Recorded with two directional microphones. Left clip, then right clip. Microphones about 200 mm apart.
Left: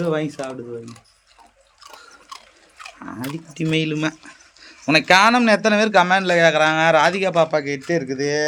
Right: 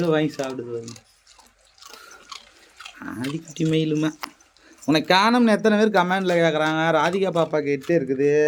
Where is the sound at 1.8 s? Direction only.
35° left (ahead or behind).